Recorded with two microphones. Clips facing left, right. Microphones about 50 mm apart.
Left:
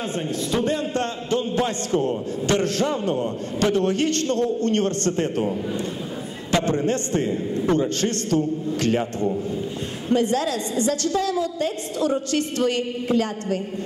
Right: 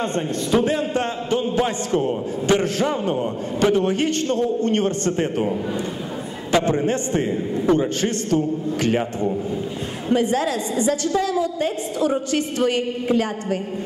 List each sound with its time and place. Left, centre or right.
0.0 s a man's voice: centre
0.6 s a man's voice: centre
8.8 s a man's voice: right